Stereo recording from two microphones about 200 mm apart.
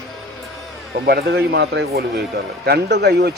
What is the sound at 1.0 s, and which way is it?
Speech, 50° right (ahead or behind).